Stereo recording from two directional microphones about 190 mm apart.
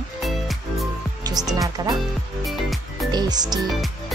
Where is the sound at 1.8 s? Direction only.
20° right (ahead or behind).